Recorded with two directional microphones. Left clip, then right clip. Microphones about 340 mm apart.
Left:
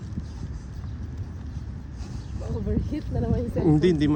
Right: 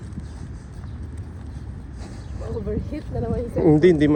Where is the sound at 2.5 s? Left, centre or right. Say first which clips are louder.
Right 2 dB; left.